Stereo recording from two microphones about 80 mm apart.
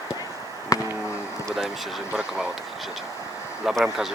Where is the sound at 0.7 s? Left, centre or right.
Left.